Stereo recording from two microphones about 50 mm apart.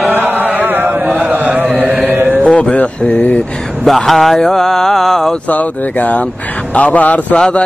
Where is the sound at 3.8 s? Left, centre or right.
Centre.